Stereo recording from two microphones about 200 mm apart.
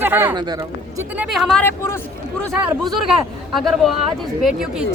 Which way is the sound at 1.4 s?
5° left (ahead or behind).